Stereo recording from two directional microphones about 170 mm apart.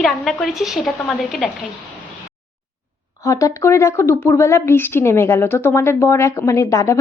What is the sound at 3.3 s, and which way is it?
A woman's voice, 20° left (ahead or behind).